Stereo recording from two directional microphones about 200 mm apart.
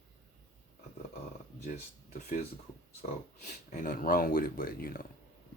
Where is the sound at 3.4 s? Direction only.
40° left (ahead or behind).